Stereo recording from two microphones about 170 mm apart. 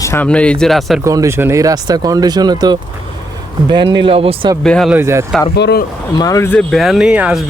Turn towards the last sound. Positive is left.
turn(degrees=-5)  # may be behind; listen again after turning